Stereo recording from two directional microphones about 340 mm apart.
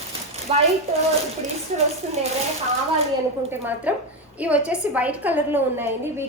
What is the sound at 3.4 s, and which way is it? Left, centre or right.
A woman's voice, centre.